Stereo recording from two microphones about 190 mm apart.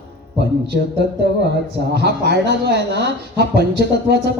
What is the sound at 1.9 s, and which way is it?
Speech, 60° right (ahead or behind).